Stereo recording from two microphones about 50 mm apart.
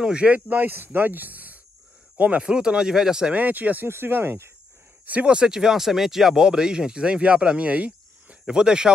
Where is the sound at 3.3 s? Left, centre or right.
Right.